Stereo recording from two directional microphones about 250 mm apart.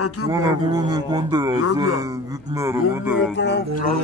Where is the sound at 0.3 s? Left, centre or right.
Centre.